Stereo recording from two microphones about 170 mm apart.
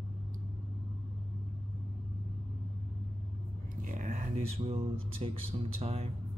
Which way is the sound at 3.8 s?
50° right (ahead or behind).